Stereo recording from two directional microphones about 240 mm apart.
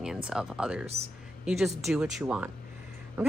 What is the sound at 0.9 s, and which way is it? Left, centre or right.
Speech, right.